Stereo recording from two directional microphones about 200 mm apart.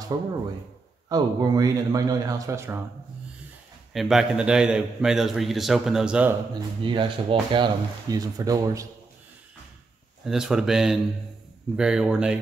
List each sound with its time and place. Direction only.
0.1 s a man's voice: 20° right (ahead or behind)
3.9 s a man's voice: centre (ahead or behind)
6.5 s speech: 25° right (ahead or behind)
10.2 s a man's voice: 5° right (ahead or behind)